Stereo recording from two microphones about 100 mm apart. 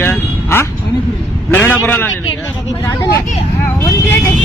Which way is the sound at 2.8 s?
25° left (ahead or behind).